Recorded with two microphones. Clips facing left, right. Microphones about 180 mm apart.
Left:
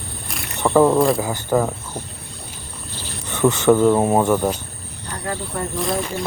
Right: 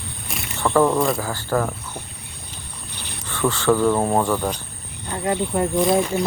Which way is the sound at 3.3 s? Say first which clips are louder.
Left 4 dB; 20° left (ahead or behind).